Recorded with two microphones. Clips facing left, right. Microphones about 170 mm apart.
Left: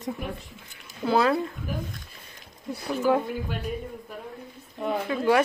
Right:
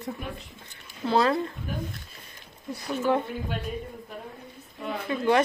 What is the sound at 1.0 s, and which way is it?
Speech, 5° left (ahead or behind).